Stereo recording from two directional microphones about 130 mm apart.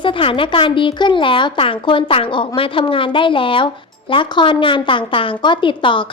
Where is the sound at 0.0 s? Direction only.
40° left (ahead or behind).